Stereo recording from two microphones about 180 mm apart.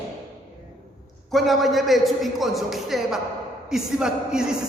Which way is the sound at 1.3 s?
Centre (ahead or behind).